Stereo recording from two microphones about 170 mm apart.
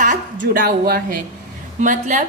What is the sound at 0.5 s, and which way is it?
Speech, 60° right (ahead or behind).